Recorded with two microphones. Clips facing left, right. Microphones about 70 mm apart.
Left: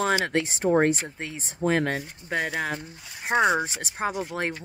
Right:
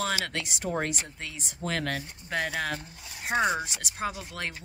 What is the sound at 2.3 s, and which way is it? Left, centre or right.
Speech, centre.